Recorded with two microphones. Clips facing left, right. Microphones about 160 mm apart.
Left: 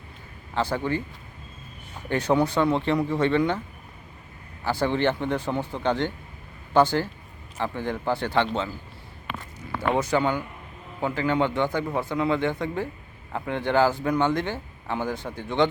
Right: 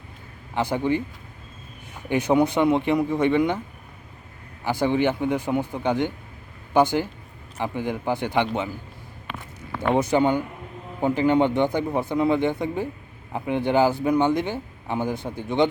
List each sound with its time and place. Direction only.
0.5 s speech: 15° right (ahead or behind)
2.0 s speech: 15° right (ahead or behind)
4.6 s speech: 15° right (ahead or behind)
9.9 s speech: 20° right (ahead or behind)